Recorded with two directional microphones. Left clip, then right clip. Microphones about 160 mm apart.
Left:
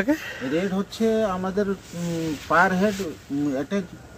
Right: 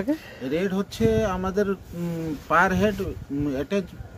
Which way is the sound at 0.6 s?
25° right (ahead or behind).